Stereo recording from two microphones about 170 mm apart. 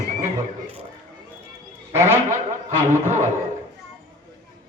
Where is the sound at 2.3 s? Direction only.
45° right (ahead or behind).